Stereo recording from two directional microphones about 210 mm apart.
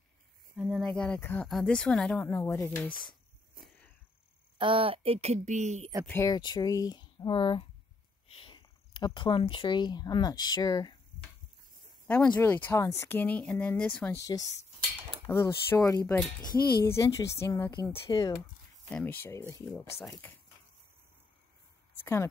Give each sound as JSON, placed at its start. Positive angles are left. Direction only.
{"t": 0.6, "sound": "speech", "side_deg": -5}
{"t": 3.6, "sound": "a sound", "side_deg": -45}
{"t": 4.6, "sound": "speech", "side_deg": -25}
{"t": 6.0, "sound": "speech", "side_deg": 15}
{"t": 12.4, "sound": "speech", "side_deg": 10}
{"t": 22.0, "sound": "speech", "side_deg": 10}